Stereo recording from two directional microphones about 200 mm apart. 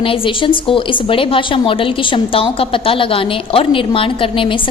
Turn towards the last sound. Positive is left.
turn(degrees=25)  # may be behind; listen again after turning